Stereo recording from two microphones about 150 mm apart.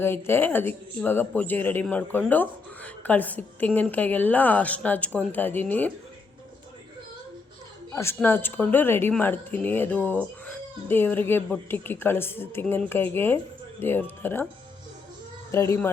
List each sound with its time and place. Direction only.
0.0 s speech: 15° left (ahead or behind)
7.9 s speech: 15° left (ahead or behind)
15.5 s speech: 20° left (ahead or behind)